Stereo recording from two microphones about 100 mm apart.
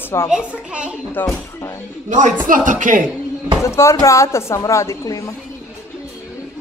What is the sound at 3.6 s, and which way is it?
A woman's voice, 30° left (ahead or behind).